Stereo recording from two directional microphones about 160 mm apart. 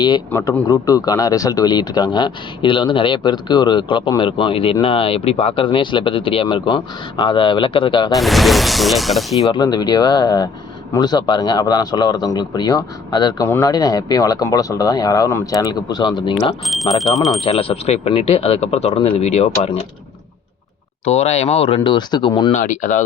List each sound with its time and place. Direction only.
0.3 s speech: 15° left (ahead or behind); by 8.1 s 30° left (ahead or behind)
8.1 s speech: centre (ahead or behind)
9.4 s speech: 25° left (ahead or behind)
16.9 s speech: centre (ahead or behind)
17.4 s speech: 35° left (ahead or behind)
21.0 s speech: 40° left (ahead or behind)
22.5 s speech: 50° left (ahead or behind)